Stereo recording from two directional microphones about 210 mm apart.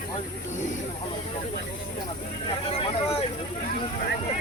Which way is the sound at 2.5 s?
25° left (ahead or behind).